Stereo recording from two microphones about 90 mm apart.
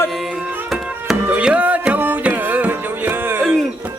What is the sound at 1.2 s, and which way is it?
Music, 15° right (ahead or behind).